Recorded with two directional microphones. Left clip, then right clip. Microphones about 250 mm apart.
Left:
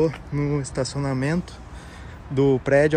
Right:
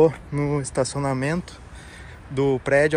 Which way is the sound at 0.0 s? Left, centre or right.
Centre.